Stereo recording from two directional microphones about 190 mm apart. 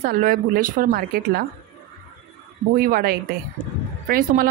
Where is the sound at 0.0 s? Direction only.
50° right (ahead or behind).